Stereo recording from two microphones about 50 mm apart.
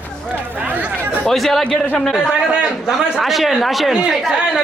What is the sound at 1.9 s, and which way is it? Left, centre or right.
Speech, centre.